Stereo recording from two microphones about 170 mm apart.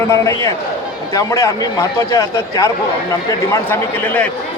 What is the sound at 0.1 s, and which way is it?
Speech, 15° left (ahead or behind).